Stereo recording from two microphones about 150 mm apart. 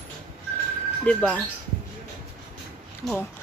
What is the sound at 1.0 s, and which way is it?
Speech, 10° left (ahead or behind).